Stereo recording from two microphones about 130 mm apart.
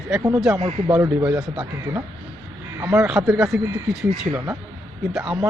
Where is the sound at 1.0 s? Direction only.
25° right (ahead or behind).